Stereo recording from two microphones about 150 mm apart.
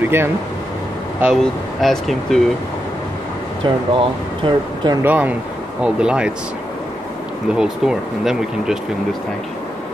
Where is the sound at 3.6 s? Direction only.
35° right (ahead or behind).